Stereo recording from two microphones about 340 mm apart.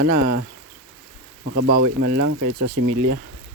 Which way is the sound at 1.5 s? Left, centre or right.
Right.